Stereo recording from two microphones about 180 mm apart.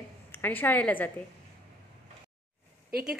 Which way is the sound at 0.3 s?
10° left (ahead or behind).